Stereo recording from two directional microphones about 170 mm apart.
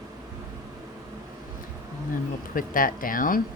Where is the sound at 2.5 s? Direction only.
55° left (ahead or behind).